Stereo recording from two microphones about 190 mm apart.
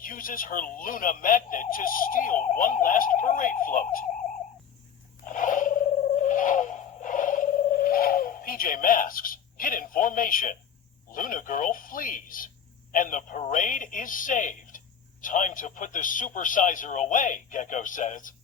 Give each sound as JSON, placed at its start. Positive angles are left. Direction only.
{"t": 0.0, "sound": "speech", "side_deg": 45}
{"t": 5.2, "sound": "a sound", "side_deg": 45}
{"t": 11.1, "sound": "speech", "side_deg": 45}